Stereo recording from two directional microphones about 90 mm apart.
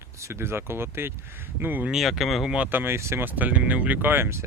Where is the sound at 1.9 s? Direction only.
Centre (ahead or behind).